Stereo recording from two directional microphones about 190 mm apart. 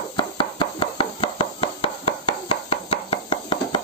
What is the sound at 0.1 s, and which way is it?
Chopping, 25° left (ahead or behind).